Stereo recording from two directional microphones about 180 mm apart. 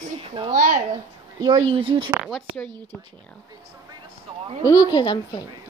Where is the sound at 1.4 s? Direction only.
25° right (ahead or behind).